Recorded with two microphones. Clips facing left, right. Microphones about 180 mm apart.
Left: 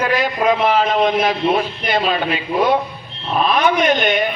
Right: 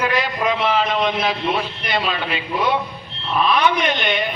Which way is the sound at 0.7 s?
45° left (ahead or behind).